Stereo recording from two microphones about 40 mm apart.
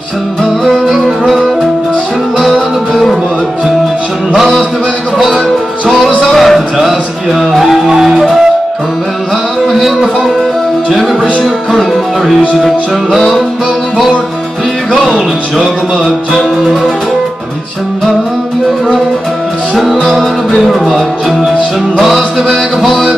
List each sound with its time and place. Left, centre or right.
0.7 s music: centre
2.9 s music: centre
6.3 s music: centre
7.9 s music: centre
9.7 s a sound: centre
10.9 s music: centre
14.9 s music: centre
19.8 s music: centre
22.0 s music: centre